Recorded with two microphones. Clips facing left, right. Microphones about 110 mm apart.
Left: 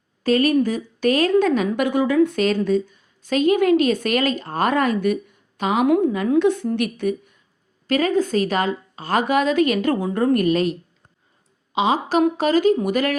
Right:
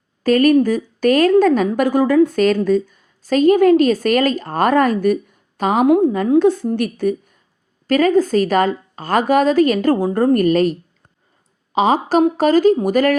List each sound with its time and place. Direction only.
0.2 s a woman's voice: 50° right (ahead or behind)